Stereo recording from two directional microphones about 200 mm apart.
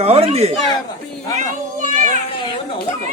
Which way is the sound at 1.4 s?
40° right (ahead or behind).